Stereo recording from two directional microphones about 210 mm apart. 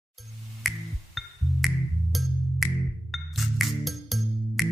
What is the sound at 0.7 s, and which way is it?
Music, centre (ahead or behind).